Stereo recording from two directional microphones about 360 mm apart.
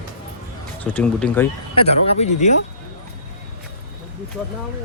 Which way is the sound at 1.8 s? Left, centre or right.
Centre.